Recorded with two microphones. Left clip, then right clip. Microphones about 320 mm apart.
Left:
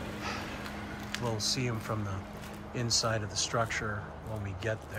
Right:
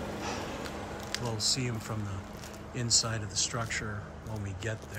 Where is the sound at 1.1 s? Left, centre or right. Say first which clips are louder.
Right 1 dB; centre.